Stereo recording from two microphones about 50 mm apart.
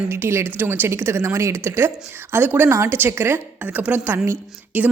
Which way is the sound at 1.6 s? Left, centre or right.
Right.